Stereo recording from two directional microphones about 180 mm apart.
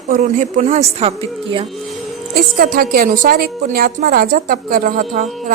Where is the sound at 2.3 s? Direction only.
55° right (ahead or behind).